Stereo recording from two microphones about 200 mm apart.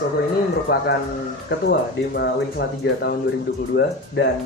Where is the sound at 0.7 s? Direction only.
50° left (ahead or behind).